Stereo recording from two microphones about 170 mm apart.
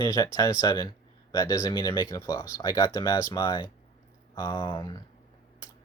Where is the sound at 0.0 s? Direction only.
20° left (ahead or behind).